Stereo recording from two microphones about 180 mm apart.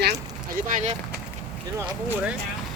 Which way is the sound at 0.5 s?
45° right (ahead or behind).